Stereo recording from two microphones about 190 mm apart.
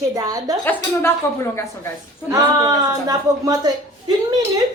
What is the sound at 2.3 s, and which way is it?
Speech, 20° right (ahead or behind).